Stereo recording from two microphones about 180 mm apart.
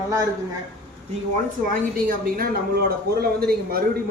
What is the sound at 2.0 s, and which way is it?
Speech, 50° right (ahead or behind).